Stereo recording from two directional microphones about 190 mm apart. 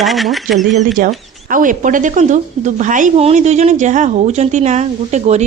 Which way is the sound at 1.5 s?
45° right (ahead or behind).